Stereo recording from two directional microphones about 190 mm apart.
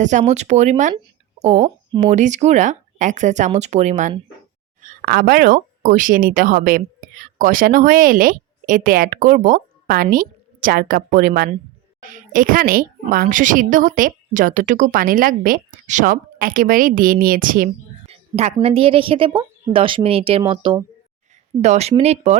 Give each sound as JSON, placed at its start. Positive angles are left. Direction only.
{"t": 0.0, "sound": "a woman's voice", "side_deg": -40}
{"t": 4.8, "sound": "a woman's voice", "side_deg": -50}
{"t": 18.0, "sound": "a sound", "side_deg": -35}
{"t": 18.6, "sound": "speech", "side_deg": -30}